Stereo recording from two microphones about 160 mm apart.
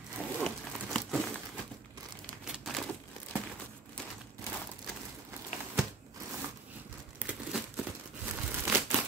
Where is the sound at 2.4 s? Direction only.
Centre (ahead or behind).